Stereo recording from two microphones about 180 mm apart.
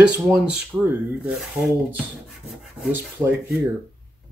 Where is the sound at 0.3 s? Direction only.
5° right (ahead or behind).